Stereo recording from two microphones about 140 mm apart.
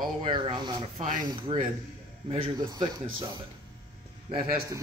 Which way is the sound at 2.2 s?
45° right (ahead or behind).